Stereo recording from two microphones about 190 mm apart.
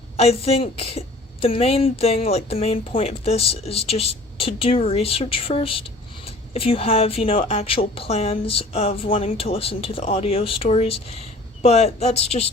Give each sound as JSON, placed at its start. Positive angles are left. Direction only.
{"t": 0.2, "sound": "a woman's voice", "side_deg": 30}